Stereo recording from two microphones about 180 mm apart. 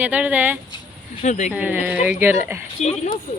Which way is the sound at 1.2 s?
40° left (ahead or behind).